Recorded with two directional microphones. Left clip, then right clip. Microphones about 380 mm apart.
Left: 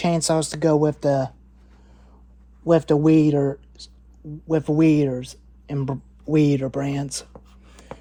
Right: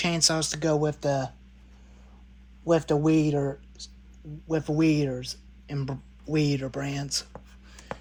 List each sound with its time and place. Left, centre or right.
0.0 s speech: centre
2.6 s speech: centre